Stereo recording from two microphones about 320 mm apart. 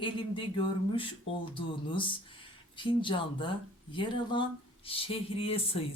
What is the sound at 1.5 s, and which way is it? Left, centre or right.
Speech, centre.